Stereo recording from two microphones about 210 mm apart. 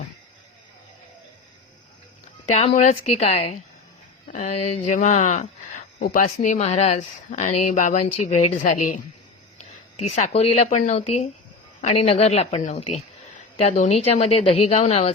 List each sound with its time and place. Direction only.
2.5 s a woman's voice: 30° left (ahead or behind)